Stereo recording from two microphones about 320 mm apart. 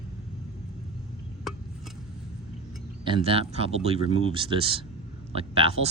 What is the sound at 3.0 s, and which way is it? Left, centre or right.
Speech, centre.